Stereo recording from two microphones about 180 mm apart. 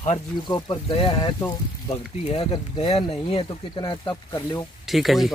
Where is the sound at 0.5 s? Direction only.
25° left (ahead or behind).